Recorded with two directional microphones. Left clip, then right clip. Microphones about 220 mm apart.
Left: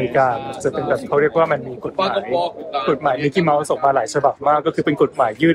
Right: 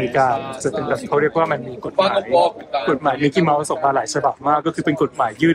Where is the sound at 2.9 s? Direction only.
20° left (ahead or behind).